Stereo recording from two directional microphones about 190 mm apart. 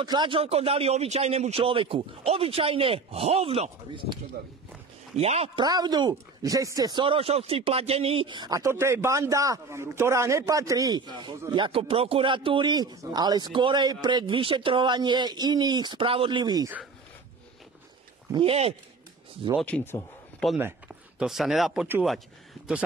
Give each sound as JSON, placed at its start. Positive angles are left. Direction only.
{"t": 0.0, "sound": "a man's voice", "side_deg": -25}
{"t": 5.6, "sound": "speech", "side_deg": -20}
{"t": 18.3, "sound": "speech", "side_deg": -30}
{"t": 19.6, "sound": "speech", "side_deg": 10}
{"t": 20.5, "sound": "speech", "side_deg": -10}